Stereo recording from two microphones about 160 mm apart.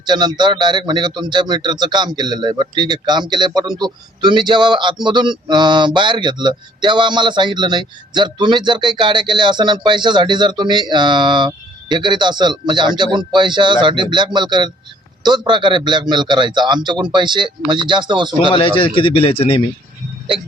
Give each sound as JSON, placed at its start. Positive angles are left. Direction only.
{"t": 0.0, "sound": "a man's voice", "side_deg": -25}
{"t": 18.5, "sound": "speech", "side_deg": 35}